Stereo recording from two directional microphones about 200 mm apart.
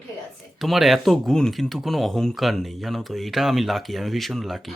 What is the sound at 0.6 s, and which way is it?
Speech, centre (ahead or behind).